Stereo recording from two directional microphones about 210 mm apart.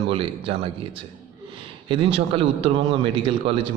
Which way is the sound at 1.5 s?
25° right (ahead or behind).